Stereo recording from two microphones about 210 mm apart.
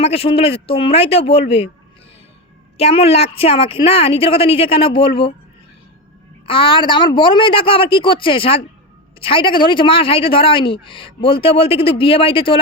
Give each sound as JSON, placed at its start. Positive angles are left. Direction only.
{"t": 0.0, "sound": "speech", "side_deg": 30}
{"t": 2.7, "sound": "speech", "side_deg": 30}
{"t": 6.4, "sound": "speech", "side_deg": 25}